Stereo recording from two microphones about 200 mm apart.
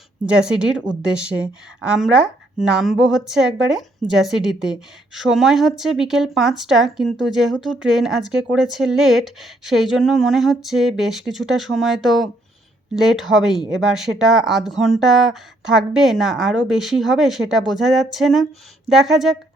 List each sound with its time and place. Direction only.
0.3 s a woman's voice: 5° right (ahead or behind)